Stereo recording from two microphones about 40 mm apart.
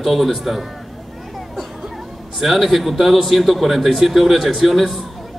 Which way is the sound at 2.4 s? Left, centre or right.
Centre.